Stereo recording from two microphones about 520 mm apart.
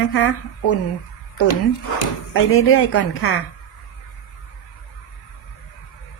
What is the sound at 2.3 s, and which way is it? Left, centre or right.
Speech, left.